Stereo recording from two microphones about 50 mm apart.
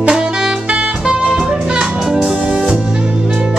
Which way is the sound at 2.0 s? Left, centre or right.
Centre.